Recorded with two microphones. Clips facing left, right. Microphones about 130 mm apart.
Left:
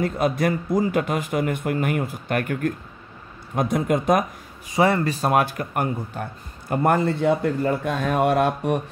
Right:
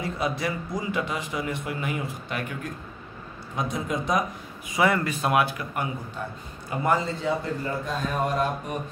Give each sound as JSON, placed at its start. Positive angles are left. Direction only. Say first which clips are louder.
{"t": 0.0, "sound": "a man's voice", "louder": "left 6 dB", "side_deg": 50}
{"t": 4.6, "sound": "speech", "louder": "left 4 dB", "side_deg": 35}